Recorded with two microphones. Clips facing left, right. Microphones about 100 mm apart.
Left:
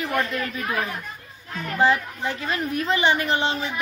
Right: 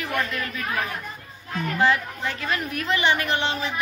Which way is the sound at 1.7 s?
25° left (ahead or behind).